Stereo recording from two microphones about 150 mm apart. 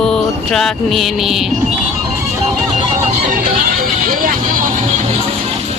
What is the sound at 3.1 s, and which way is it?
Vehicle, 65° right (ahead or behind).